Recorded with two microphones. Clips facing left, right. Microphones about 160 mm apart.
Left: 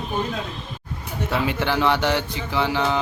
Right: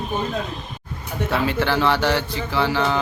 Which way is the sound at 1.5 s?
15° left (ahead or behind).